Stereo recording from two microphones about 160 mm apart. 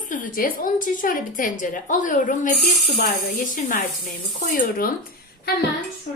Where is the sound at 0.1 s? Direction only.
60° left (ahead or behind).